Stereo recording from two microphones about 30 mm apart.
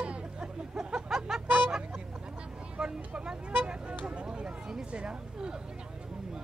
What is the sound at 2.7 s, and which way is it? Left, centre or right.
Vehicle, right.